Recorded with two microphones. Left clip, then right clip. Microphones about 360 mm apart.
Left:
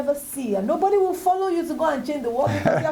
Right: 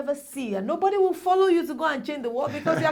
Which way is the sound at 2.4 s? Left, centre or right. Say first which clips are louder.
Left 4 dB; left.